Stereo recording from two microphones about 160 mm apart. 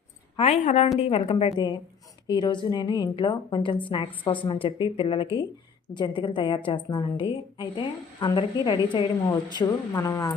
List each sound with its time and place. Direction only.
0.3 s a woman's voice: 40° left (ahead or behind); by 10.3 s 20° left (ahead or behind)